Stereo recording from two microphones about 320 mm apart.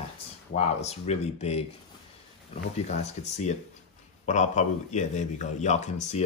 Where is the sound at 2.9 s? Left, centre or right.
Left.